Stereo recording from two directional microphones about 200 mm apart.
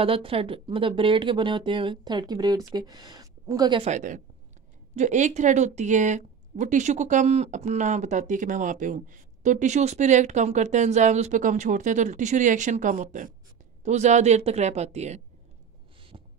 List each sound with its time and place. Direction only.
0.0 s speech: 25° right (ahead or behind)
3.8 s a woman's voice: 35° right (ahead or behind)
16.1 s a sound: 30° right (ahead or behind)